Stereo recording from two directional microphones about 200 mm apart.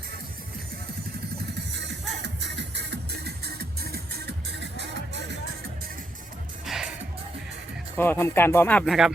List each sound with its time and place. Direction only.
1.8 s music: 60° right (ahead or behind)
6.7 s music: centre (ahead or behind)
7.9 s speech: 10° left (ahead or behind)